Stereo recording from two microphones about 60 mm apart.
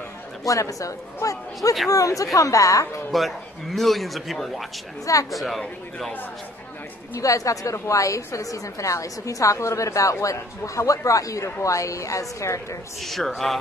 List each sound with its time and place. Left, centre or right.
0.4 s a man's voice: left
3.1 s a man's voice: centre
7.2 s a man's voice: left
7.7 s a woman's voice: left
13.0 s a man's voice: centre